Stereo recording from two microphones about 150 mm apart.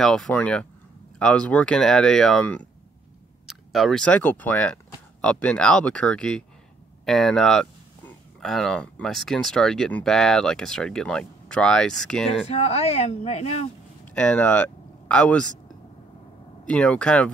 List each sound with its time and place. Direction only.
0.0 s speech: 5° left (ahead or behind)
12.4 s speech: 45° left (ahead or behind)
14.0 s speech: 10° left (ahead or behind)
16.6 s speech: 5° left (ahead or behind)